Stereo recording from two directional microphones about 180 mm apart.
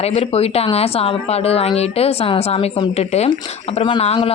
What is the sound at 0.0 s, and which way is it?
A woman's voice, 35° left (ahead or behind).